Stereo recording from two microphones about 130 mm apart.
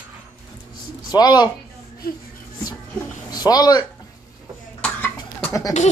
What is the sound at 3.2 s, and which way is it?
Speech, 30° left (ahead or behind).